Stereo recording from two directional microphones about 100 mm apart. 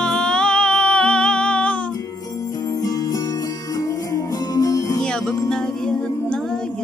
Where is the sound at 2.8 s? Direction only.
40° left (ahead or behind).